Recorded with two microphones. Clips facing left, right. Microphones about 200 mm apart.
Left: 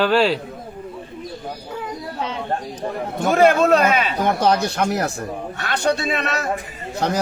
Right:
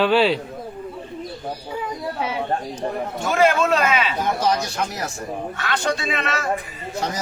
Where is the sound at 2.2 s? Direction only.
10° right (ahead or behind).